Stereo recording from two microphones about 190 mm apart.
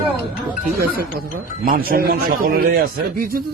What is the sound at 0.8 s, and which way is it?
A man's voice, 55° right (ahead or behind).